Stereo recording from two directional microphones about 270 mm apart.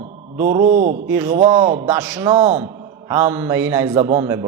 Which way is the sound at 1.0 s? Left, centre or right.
Centre.